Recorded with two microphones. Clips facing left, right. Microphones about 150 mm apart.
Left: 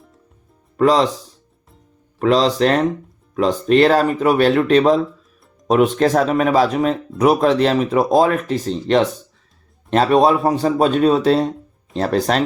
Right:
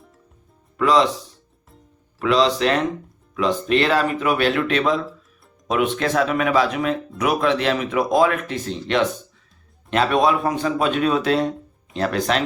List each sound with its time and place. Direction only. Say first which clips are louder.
0.8 s speech: left 3 dB; 40° left (ahead or behind)
2.1 s speech: left 3 dB; 40° left (ahead or behind)